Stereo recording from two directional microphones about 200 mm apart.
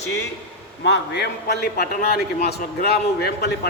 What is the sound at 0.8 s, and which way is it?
A man's voice, 60° left (ahead or behind).